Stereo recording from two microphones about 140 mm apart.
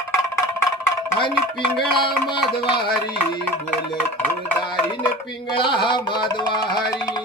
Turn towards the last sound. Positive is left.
turn(degrees=30)  # may be behind; listen again after turning